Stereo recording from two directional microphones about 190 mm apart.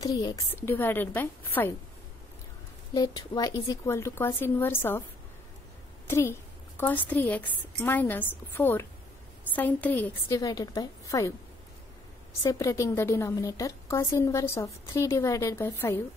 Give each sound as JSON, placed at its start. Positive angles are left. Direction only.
{"t": 0.0, "sound": "a woman's voice", "side_deg": 20}
{"t": 2.9, "sound": "a woman's voice", "side_deg": 20}
{"t": 6.0, "sound": "a woman's voice", "side_deg": 15}
{"t": 10.4, "sound": "a woman's voice", "side_deg": 20}
{"t": 12.4, "sound": "a woman's voice", "side_deg": 15}